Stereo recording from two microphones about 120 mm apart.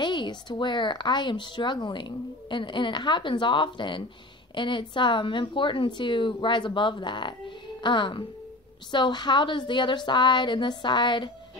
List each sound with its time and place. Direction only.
0.0 s speech: 40° left (ahead or behind)